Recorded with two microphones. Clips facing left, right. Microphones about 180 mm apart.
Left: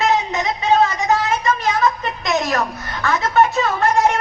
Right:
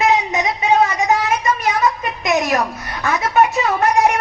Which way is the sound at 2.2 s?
15° right (ahead or behind).